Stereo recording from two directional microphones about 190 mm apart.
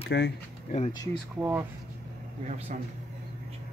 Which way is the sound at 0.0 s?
65° left (ahead or behind).